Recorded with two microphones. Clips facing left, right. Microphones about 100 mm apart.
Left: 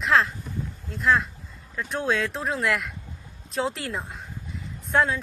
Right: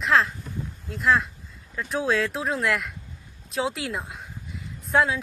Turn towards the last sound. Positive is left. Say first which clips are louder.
# right 1 dB
turn(degrees=-5)  # may be behind; listen again after turning